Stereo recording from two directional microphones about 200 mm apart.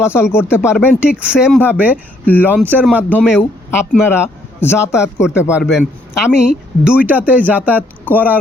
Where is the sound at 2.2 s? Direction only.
10° left (ahead or behind).